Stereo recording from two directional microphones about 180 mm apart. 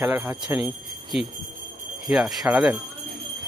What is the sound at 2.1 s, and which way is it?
Speech, centre (ahead or behind).